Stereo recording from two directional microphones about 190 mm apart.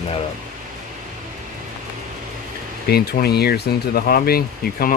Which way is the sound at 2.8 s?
55° left (ahead or behind).